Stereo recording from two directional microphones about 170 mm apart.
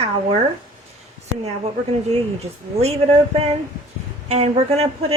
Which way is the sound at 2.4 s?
35° right (ahead or behind).